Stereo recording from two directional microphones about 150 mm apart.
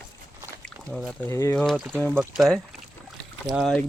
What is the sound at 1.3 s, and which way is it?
Speech, 20° left (ahead or behind).